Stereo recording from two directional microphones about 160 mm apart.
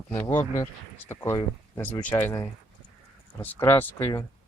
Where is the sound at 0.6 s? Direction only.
15° left (ahead or behind).